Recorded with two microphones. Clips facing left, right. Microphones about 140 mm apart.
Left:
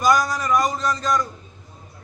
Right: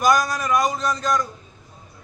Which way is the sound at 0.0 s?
10° right (ahead or behind).